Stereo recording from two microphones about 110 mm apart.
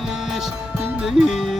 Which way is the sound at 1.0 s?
5° right (ahead or behind).